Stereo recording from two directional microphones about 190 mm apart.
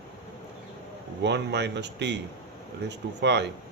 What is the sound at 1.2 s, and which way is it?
Speech, 65° right (ahead or behind).